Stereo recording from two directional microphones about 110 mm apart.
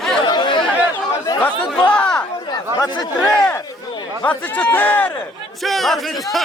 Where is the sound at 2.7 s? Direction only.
35° left (ahead or behind).